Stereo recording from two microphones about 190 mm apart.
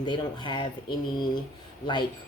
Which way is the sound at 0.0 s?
25° left (ahead or behind).